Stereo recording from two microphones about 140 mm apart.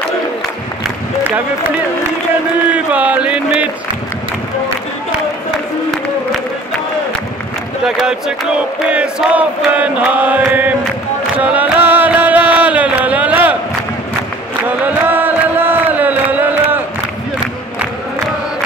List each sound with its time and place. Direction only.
0.8 s run: 15° right (ahead or behind)
2.7 s a sound: 10° right (ahead or behind)
7.8 s chant: 5° right (ahead or behind)
11.3 s music: 10° right (ahead or behind)
15.0 s chant: 15° right (ahead or behind)